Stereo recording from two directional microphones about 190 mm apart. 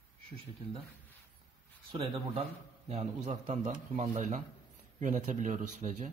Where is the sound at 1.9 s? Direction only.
30° right (ahead or behind).